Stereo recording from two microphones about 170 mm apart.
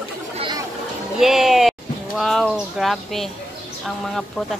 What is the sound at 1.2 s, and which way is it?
A woman's voice, centre (ahead or behind).